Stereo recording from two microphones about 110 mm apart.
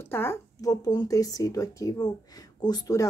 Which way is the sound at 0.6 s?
35° left (ahead or behind).